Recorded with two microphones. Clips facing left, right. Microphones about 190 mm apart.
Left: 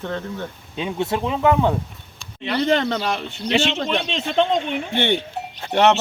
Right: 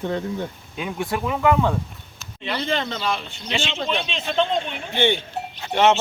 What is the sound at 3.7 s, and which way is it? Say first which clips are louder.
Speech: left 2 dB; 45° left (ahead or behind).